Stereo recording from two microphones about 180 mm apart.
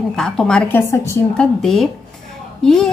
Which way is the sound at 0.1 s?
5° left (ahead or behind).